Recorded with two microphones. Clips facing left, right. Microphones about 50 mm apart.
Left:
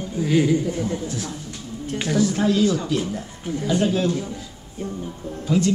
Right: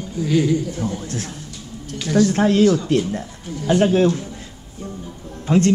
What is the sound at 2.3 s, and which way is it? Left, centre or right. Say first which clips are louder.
Speech: right 4 dB; right.